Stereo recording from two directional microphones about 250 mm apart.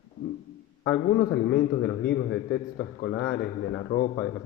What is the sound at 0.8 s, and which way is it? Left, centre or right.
A man's voice, left.